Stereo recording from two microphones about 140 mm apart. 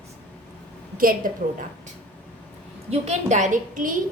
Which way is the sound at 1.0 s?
85° right.